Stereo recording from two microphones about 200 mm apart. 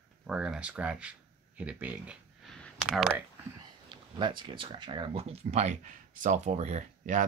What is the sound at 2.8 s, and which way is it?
Speech, 5° right (ahead or behind).